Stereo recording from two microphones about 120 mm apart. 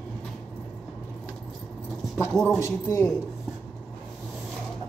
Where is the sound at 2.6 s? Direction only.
20° left (ahead or behind).